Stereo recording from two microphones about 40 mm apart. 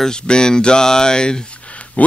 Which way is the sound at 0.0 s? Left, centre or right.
Centre.